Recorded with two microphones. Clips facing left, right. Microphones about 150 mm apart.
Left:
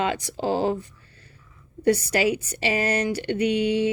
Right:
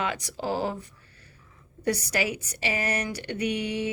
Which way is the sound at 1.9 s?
30° left (ahead or behind).